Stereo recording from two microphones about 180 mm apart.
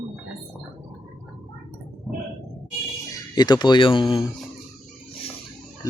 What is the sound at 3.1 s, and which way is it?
Speech, 20° left (ahead or behind).